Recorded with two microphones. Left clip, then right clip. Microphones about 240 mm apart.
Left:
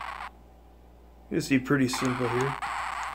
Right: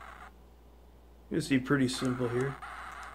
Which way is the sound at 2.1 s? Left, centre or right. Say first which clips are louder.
Left 5 dB; left.